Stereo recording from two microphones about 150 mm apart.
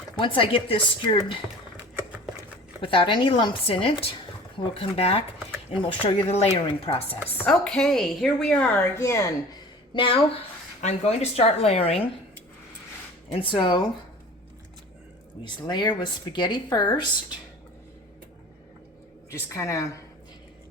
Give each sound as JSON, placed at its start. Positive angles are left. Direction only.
{"t": 0.2, "sound": "speech", "side_deg": 35}
{"t": 2.8, "sound": "speech", "side_deg": 35}
{"t": 7.4, "sound": "a woman's voice", "side_deg": 5}
{"t": 9.9, "sound": "speech", "side_deg": 35}
{"t": 10.8, "sound": "speech", "side_deg": 50}
{"t": 13.3, "sound": "speech", "side_deg": 35}
{"t": 15.4, "sound": "speech", "side_deg": 30}
{"t": 19.3, "sound": "a woman's voice", "side_deg": 20}